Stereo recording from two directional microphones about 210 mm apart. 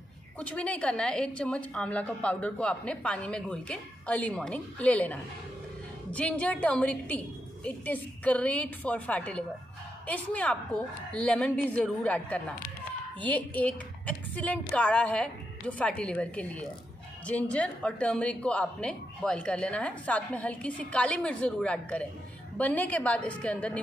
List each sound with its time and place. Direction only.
0.4 s a woman's voice: 5° left (ahead or behind)